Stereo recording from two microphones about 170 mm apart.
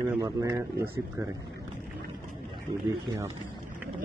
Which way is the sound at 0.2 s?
25° right (ahead or behind).